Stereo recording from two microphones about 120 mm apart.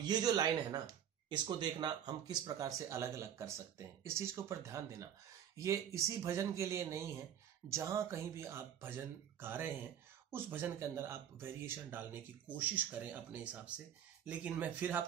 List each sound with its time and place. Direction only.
0.0 s speech: 35° right (ahead or behind); by 15.0 s 15° right (ahead or behind)